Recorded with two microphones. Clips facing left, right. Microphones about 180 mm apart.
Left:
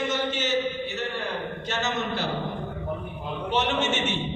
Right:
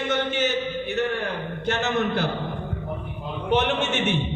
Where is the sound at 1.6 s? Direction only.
55° right (ahead or behind).